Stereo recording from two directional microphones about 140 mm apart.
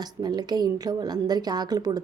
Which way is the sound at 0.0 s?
30° right (ahead or behind).